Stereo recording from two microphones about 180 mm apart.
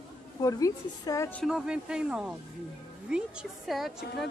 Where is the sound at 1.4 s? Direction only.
5° right (ahead or behind).